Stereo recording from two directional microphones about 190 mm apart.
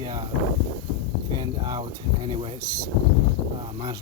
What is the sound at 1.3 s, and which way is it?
Speech, 20° right (ahead or behind).